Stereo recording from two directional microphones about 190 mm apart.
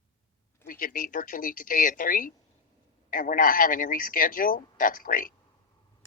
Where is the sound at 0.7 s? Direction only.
45° left (ahead or behind).